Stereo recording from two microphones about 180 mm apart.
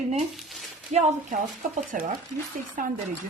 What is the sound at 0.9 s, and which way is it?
Speech, 40° right (ahead or behind).